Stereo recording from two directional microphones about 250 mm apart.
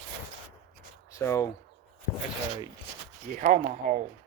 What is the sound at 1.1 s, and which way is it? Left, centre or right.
Speech, centre.